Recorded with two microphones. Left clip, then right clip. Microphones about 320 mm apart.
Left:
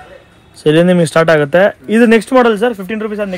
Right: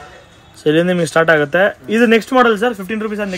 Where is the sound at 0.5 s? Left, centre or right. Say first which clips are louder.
Left 4 dB; centre.